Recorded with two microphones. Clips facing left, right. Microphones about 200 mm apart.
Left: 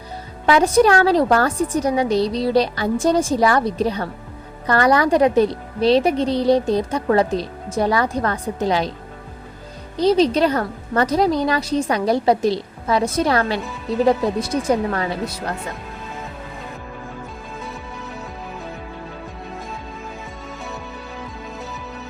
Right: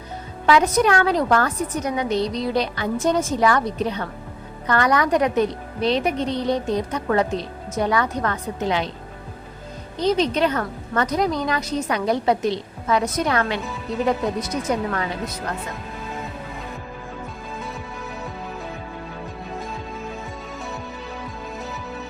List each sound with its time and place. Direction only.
0.4 s a woman's voice: 30° left (ahead or behind)
10.0 s a woman's voice: 35° left (ahead or behind)